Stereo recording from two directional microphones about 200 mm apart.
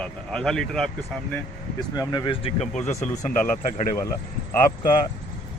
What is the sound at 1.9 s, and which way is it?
Speech, 20° left (ahead or behind).